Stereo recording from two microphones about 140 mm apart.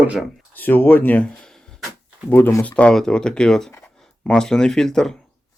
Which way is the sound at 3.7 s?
15° left (ahead or behind).